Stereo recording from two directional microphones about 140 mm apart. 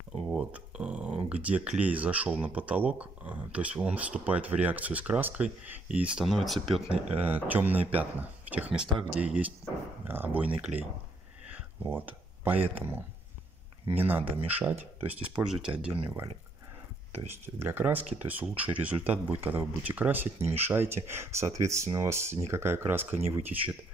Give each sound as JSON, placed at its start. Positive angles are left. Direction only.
{"t": 0.1, "sound": "a sound", "side_deg": -5}
{"t": 2.4, "sound": "speech", "side_deg": -10}
{"t": 17.6, "sound": "speech", "side_deg": -15}